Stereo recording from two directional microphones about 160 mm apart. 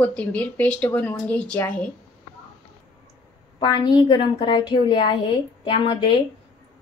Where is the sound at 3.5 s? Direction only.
30° left (ahead or behind).